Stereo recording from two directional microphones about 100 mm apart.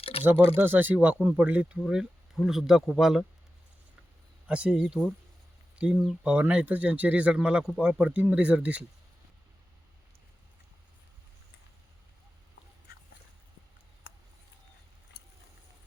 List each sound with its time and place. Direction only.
0.0 s a sound: 75° left (ahead or behind)
0.5 s speech: 20° right (ahead or behind)
1.9 s speech: 5° right (ahead or behind)
4.4 s speech: 10° right (ahead or behind)